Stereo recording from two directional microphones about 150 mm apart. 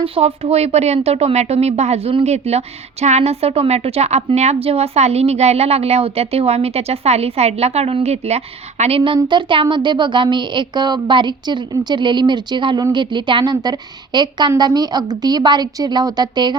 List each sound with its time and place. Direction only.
0.0 s speech: 40° right (ahead or behind)